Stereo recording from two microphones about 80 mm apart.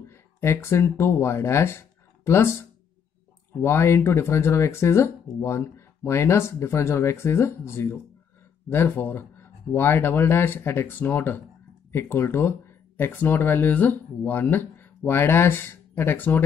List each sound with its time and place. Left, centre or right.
0.1 s speech: left
3.6 s speech: left